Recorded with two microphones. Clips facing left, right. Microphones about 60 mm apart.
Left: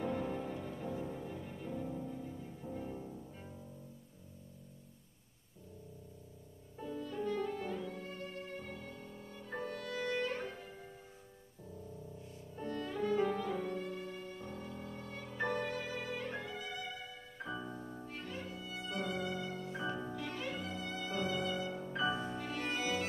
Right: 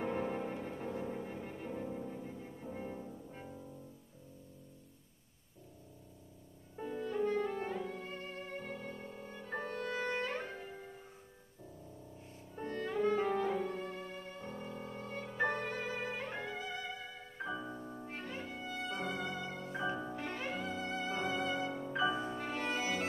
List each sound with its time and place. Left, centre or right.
0.0 s music: right
6.8 s music: right
12.5 s music: right
17.4 s music: centre
18.0 s music: right
19.8 s music: centre
20.2 s music: right
21.7 s music: centre
22.2 s music: right